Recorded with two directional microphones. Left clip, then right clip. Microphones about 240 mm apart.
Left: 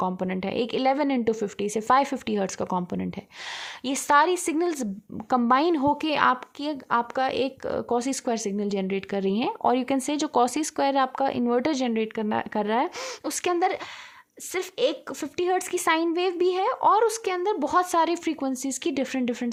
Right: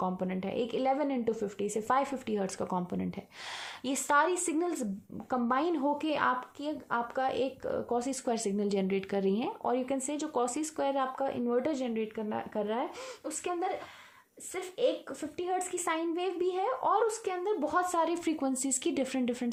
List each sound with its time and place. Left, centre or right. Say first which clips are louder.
0.0 s speech: left 6 dB; left